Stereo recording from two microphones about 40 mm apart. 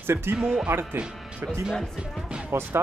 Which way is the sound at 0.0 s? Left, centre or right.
Right.